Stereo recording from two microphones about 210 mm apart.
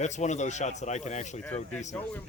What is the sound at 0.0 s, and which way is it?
Speech, 35° left (ahead or behind).